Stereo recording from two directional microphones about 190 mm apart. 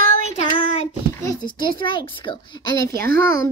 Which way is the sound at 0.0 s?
45° right (ahead or behind).